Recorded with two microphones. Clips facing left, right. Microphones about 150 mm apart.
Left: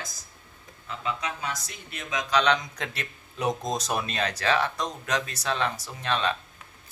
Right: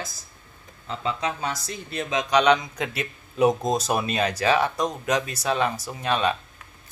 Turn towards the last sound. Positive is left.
turn(degrees=-10)  # may be behind; listen again after turning